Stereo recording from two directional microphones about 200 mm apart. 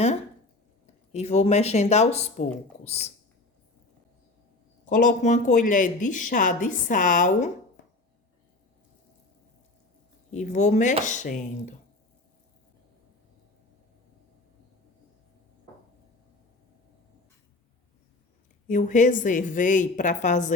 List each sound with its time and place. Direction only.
1.1 s a woman's voice: 35° left (ahead or behind)
4.9 s a woman's voice: 40° left (ahead or behind)
10.3 s a woman's voice: 35° left (ahead or behind)
18.7 s a woman's voice: 40° left (ahead or behind)